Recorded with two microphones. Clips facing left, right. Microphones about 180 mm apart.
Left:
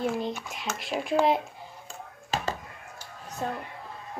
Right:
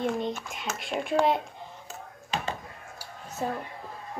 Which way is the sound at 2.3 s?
45° left (ahead or behind).